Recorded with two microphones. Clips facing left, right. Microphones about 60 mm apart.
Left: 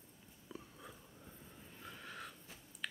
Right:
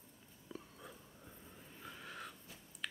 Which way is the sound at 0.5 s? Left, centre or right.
Centre.